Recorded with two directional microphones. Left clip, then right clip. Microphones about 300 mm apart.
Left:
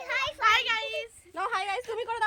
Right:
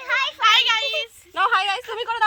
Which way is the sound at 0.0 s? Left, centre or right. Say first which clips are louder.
Right 7 dB; centre.